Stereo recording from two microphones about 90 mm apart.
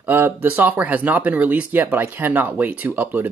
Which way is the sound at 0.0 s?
20° right (ahead or behind).